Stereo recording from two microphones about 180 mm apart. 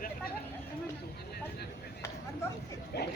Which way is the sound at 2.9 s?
65° left (ahead or behind).